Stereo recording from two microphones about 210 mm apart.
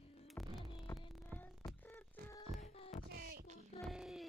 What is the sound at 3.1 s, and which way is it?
Music, 45° right (ahead or behind).